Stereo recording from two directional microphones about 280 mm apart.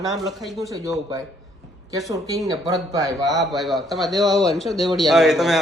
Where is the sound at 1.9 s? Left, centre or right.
Centre.